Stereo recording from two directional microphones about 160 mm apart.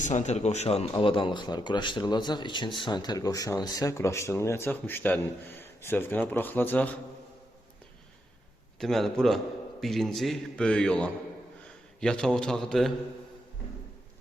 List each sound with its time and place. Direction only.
0.0 s speech: 50° left (ahead or behind); by 6.9 s 10° left (ahead or behind)
8.8 s a man's voice: centre (ahead or behind)